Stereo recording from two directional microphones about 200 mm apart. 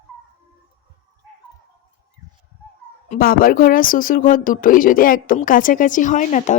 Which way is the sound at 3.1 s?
45° left (ahead or behind).